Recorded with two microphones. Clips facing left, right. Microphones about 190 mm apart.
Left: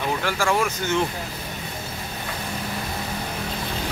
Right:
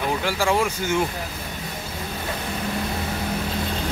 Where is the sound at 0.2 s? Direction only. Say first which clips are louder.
Right 1 dB; 15° right (ahead or behind).